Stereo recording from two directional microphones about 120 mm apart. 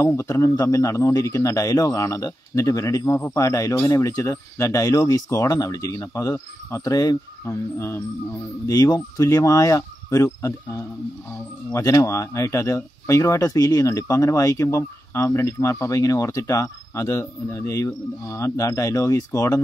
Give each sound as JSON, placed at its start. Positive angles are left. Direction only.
{"t": 0.0, "sound": "speech", "side_deg": 25}